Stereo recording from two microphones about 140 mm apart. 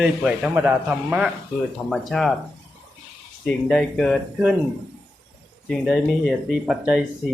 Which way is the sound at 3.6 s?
Centre (ahead or behind).